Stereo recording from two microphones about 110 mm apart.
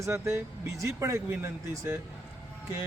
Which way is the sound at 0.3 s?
25° right (ahead or behind).